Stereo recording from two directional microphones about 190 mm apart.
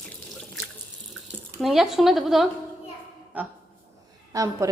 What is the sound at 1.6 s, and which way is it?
A woman's voice, centre (ahead or behind).